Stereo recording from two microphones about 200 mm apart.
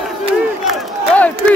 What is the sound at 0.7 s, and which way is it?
Crowd, 5° left (ahead or behind).